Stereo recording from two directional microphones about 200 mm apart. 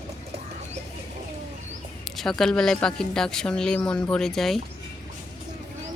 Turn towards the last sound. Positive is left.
turn(degrees=0)  # may be behind; listen again after turning